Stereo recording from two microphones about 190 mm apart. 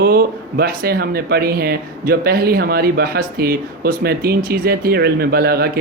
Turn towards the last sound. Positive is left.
turn(degrees=-55)  # may be behind; listen again after turning